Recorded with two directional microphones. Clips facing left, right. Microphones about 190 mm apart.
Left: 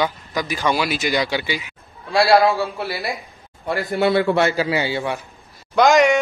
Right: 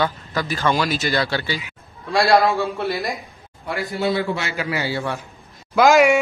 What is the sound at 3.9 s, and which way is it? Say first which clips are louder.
Speech: left 6 dB; 65° left (ahead or behind).